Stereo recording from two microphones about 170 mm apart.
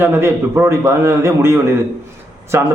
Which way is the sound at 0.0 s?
15° right (ahead or behind).